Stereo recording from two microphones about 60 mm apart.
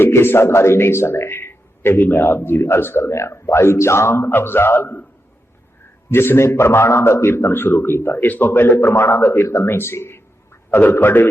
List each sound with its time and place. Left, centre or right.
0.0 s a man's voice: left
6.1 s a man's voice: left
10.7 s a man's voice: left
10.9 s a man's voice: left